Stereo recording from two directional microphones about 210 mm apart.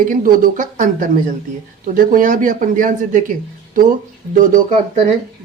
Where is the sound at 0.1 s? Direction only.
40° right (ahead or behind).